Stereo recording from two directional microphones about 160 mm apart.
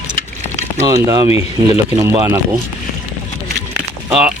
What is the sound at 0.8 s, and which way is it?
Speech, 20° right (ahead or behind).